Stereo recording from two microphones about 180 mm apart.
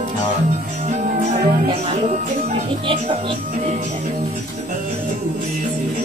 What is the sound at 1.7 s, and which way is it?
Speech, 35° right (ahead or behind).